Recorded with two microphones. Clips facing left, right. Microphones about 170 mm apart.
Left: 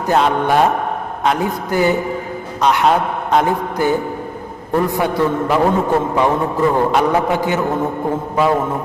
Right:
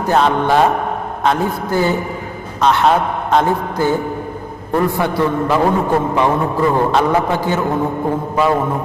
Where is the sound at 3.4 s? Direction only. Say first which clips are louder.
Even; 15° left (ahead or behind).